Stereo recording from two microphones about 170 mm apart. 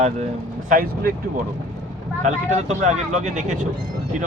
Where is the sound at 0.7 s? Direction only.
60° right (ahead or behind).